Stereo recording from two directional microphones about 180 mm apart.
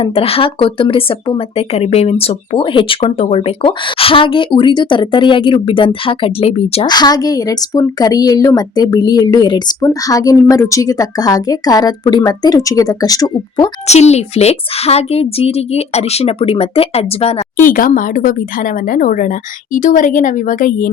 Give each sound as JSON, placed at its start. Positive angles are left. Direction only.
{"t": 0.0, "sound": "speech", "side_deg": 30}
{"t": 6.9, "sound": "speech", "side_deg": 20}
{"t": 13.8, "sound": "a woman's voice", "side_deg": 40}
{"t": 17.7, "sound": "a woman's voice", "side_deg": 50}